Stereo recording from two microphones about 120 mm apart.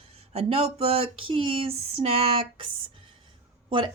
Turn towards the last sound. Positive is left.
turn(degrees=-40)  # may be behind; listen again after turning